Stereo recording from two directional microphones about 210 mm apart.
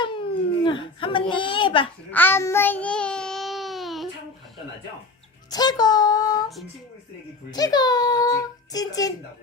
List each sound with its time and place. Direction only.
0.0 s a sound: 25° left (ahead or behind)
2.0 s child singing: 10° left (ahead or behind)
5.5 s a child's voice: 20° left (ahead or behind)
7.5 s a child's voice: 20° left (ahead or behind)